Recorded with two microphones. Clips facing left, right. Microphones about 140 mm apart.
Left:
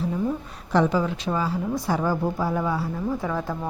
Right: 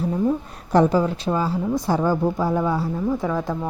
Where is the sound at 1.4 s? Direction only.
25° right (ahead or behind).